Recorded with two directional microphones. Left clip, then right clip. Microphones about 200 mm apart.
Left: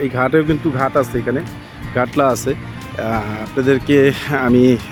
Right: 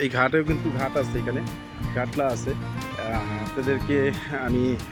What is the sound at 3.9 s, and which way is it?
Speech, 40° left (ahead or behind).